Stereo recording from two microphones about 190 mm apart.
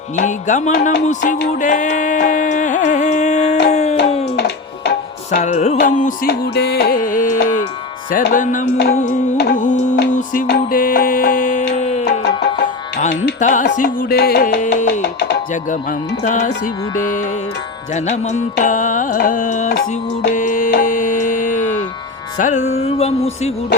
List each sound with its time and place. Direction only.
0.2 s music: 40° left (ahead or behind)
4.4 s music: 60° left (ahead or behind)
5.4 s music: 40° left (ahead or behind)
10.4 s music: 50° left (ahead or behind); by 12.0 s 35° left (ahead or behind)
13.4 s music: 40° left (ahead or behind); by 15.4 s 60° left (ahead or behind)
15.7 s music: 40° left (ahead or behind)
17.9 s music: 40° left (ahead or behind)
21.6 s music: 10° left (ahead or behind)
22.4 s music: 40° left (ahead or behind)